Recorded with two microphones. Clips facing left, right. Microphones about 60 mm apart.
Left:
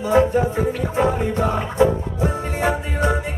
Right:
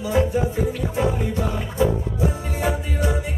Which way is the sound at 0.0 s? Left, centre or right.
Left.